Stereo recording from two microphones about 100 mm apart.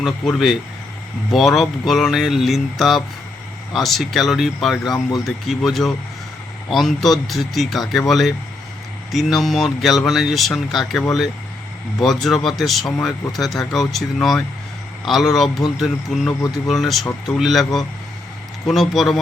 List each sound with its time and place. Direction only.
0.0 s speech: centre (ahead or behind)
4.8 s speech: 45° left (ahead or behind)
5.2 s speech: centre (ahead or behind)